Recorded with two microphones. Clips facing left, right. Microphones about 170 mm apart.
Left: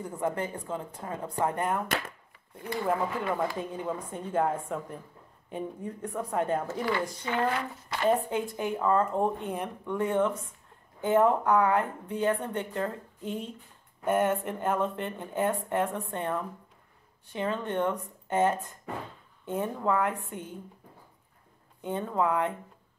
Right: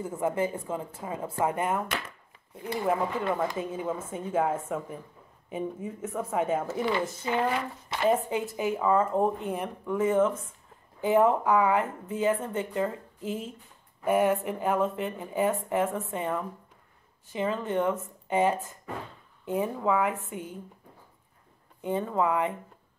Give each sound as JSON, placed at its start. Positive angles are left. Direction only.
{"t": 0.0, "sound": "speech", "side_deg": -5}
{"t": 6.9, "sound": "speech", "side_deg": -25}
{"t": 7.3, "sound": "speech", "side_deg": -5}
{"t": 21.8, "sound": "speech", "side_deg": 0}